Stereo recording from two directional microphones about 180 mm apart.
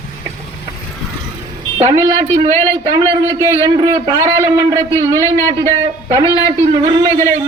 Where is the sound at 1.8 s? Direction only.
30° right (ahead or behind).